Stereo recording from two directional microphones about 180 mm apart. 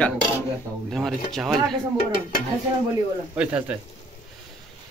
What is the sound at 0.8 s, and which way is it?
Speech, centre (ahead or behind).